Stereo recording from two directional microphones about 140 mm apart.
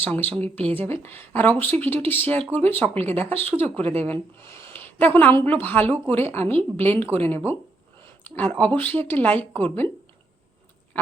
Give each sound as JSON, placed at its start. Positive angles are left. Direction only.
{"t": 0.0, "sound": "speech", "side_deg": 10}
{"t": 3.0, "sound": "speech", "side_deg": -45}
{"t": 3.6, "sound": "speech", "side_deg": 10}
{"t": 10.9, "sound": "frog", "side_deg": 10}